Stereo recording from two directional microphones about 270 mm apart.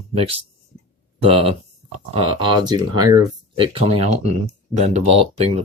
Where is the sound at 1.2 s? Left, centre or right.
Right.